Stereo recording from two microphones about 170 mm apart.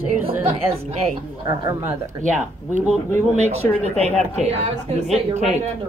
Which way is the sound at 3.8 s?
40° right (ahead or behind).